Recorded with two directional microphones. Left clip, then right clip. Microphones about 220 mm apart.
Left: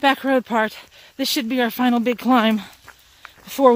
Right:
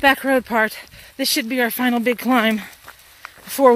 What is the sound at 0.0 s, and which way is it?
Speech, 20° left (ahead or behind).